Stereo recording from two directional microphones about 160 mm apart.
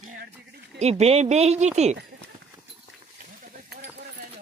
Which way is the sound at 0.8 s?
40° right (ahead or behind).